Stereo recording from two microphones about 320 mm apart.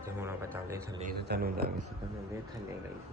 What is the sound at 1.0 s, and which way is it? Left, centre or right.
Speech, right.